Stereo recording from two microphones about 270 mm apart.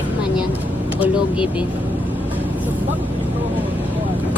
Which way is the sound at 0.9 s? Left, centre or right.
Centre.